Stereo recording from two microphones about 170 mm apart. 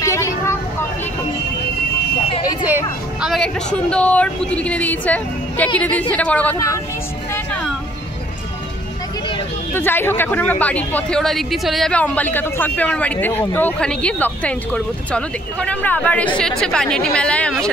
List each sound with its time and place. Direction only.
0.0 s vehicle: 20° left (ahead or behind)
2.6 s speech: 5° right (ahead or behind); by 6.8 s 15° left (ahead or behind)
7.3 s music: 5° left (ahead or behind)
9.8 s speech: 10° left (ahead or behind)